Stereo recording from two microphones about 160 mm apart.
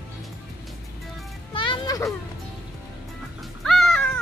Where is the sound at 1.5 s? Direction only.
30° left (ahead or behind).